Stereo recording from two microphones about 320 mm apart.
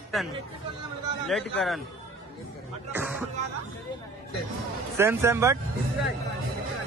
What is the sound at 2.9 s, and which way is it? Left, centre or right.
Music, centre.